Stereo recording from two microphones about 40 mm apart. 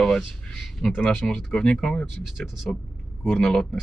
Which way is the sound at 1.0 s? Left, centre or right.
Left.